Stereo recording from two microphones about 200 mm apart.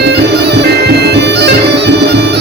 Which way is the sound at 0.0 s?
55° right (ahead or behind).